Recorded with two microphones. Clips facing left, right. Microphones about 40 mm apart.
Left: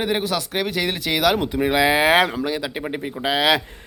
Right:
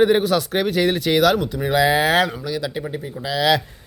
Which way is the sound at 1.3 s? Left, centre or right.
Left.